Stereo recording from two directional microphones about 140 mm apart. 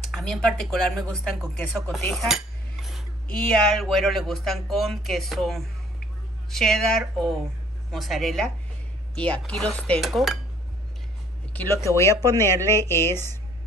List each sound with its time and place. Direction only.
0.1 s speech: 5° left (ahead or behind)
1.5 s cutlery: 5° left (ahead or behind)
3.3 s speech: 5° left (ahead or behind)
11.5 s speech: 15° left (ahead or behind)